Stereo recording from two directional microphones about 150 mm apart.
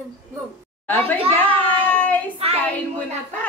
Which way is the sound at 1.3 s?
10° left (ahead or behind).